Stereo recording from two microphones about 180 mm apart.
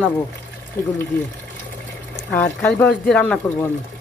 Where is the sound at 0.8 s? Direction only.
15° left (ahead or behind).